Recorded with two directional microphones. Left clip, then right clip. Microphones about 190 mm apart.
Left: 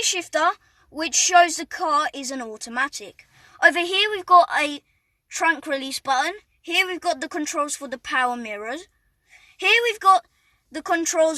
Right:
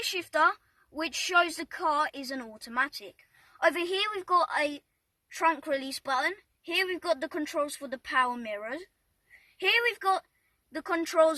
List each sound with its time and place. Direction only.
0.2 s a woman's voice: 25° left (ahead or behind)